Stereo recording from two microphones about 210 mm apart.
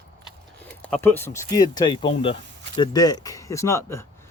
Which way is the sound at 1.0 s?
10° left (ahead or behind).